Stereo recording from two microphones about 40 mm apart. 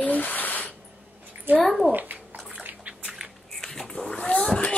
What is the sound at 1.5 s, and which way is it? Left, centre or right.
Speech, right.